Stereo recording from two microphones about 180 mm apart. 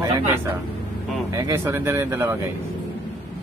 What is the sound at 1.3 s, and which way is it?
Speech, 15° right (ahead or behind).